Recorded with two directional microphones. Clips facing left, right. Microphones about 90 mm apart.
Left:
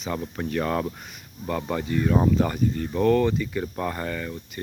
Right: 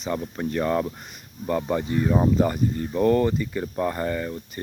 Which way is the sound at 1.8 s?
25° right (ahead or behind).